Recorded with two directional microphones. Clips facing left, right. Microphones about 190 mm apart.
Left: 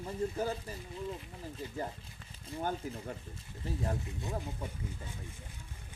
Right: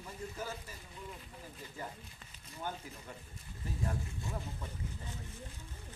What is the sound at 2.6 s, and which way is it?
Speech, 45° left (ahead or behind).